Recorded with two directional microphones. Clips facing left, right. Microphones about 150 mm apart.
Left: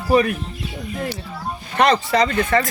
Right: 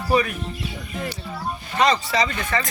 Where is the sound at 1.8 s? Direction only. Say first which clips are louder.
Left 4 dB; 60° left (ahead or behind).